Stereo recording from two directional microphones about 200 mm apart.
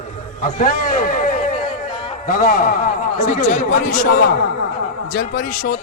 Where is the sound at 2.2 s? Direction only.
45° left (ahead or behind).